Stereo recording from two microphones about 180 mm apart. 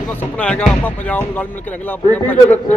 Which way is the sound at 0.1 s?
10° left (ahead or behind).